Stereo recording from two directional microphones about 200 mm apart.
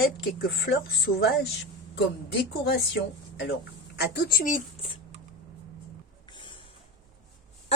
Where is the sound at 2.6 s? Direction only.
55° left (ahead or behind).